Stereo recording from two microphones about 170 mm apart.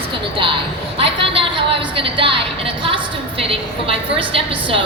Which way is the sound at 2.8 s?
30° right (ahead or behind).